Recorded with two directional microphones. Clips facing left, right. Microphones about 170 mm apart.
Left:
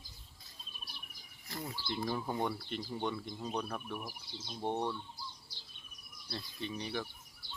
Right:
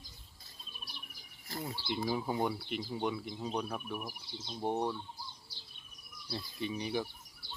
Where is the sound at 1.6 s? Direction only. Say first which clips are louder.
Right 2 dB; 15° right (ahead or behind).